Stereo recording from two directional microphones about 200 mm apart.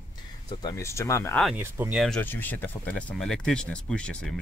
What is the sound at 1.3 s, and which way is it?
Speech, centre (ahead or behind).